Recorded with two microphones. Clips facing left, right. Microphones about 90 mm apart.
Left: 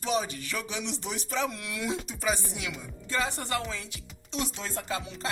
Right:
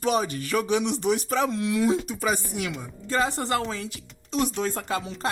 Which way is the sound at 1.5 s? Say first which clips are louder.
Right 12 dB; 25° right (ahead or behind).